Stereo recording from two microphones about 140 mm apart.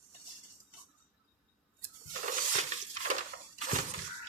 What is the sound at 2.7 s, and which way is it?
Crushing, 55° right (ahead or behind).